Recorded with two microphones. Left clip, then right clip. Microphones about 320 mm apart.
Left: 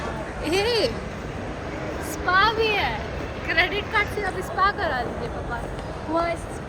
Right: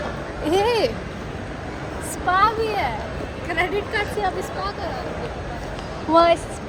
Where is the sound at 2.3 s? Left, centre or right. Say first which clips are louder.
Right 2 dB; centre.